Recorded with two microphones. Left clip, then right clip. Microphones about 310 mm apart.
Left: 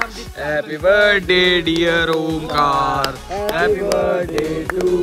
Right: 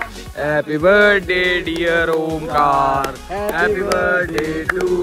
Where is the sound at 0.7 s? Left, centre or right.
Centre.